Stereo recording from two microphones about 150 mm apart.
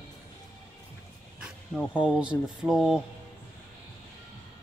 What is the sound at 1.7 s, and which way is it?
Speech, 5° right (ahead or behind).